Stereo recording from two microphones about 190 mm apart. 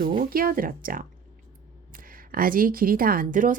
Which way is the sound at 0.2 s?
50° right (ahead or behind).